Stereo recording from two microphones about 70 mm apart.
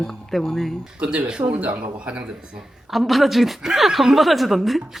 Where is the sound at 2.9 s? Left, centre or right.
Centre.